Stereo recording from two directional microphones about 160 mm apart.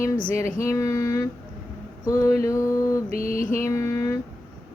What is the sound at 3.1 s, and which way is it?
Mantra, 60° left (ahead or behind).